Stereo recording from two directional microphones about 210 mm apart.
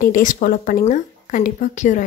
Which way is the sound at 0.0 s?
40° left (ahead or behind).